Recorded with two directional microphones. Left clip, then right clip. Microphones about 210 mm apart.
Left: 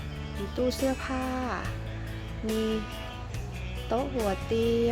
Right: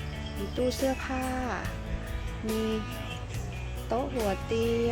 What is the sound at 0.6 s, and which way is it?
Speech, 5° left (ahead or behind).